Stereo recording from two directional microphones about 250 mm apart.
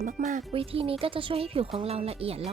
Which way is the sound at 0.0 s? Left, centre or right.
Right.